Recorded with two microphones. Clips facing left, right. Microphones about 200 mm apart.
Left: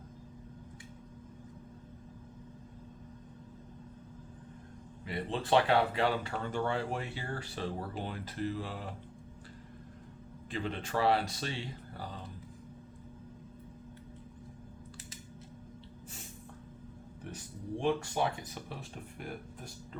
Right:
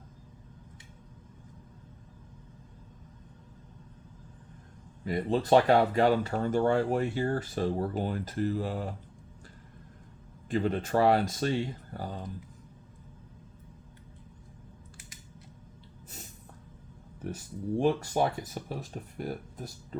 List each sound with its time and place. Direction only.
5.0 s speech: 40° right (ahead or behind)
10.5 s speech: 45° right (ahead or behind)
17.7 s speech: 40° right (ahead or behind)